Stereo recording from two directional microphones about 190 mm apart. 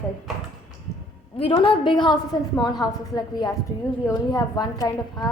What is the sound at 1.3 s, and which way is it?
A woman's voice, 30° left (ahead or behind).